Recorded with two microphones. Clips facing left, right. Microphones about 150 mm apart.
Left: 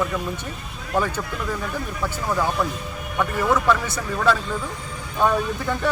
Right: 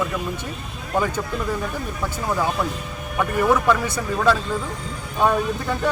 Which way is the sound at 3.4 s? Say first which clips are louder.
Right 2 dB; 15° right (ahead or behind).